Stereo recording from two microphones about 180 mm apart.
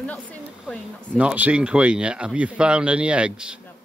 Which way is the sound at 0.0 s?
10° left (ahead or behind).